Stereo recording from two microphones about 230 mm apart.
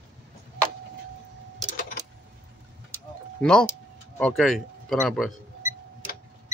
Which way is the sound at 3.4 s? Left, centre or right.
Centre.